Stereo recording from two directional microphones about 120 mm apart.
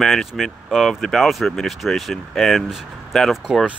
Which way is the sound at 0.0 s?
Centre (ahead or behind).